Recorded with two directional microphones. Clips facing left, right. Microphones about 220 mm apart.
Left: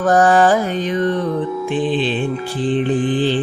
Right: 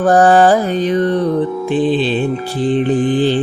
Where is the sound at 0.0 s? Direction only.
35° right (ahead or behind).